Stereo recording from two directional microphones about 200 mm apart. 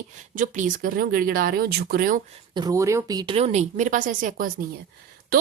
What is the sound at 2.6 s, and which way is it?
Speech, 15° right (ahead or behind).